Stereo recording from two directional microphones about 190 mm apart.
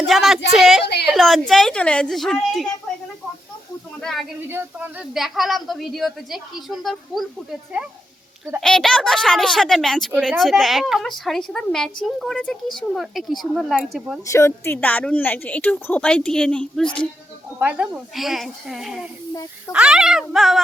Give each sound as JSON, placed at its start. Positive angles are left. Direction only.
{"t": 0.1, "sound": "a woman's voice", "side_deg": 0}
{"t": 4.0, "sound": "speech", "side_deg": 0}
{"t": 4.4, "sound": "speech", "side_deg": -10}
{"t": 8.6, "sound": "speech", "side_deg": 5}
{"t": 14.3, "sound": "a woman's voice", "side_deg": 15}
{"t": 17.6, "sound": "speech", "side_deg": -5}
{"t": 19.3, "sound": "snake", "side_deg": 15}
{"t": 19.7, "sound": "speech", "side_deg": -5}